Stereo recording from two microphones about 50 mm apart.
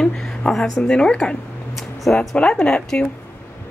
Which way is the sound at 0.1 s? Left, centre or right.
Centre.